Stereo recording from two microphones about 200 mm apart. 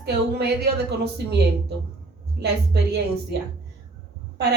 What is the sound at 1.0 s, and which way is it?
A woman's voice, 55° right (ahead or behind).